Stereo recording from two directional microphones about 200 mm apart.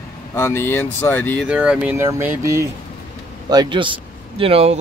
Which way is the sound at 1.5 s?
5° right (ahead or behind).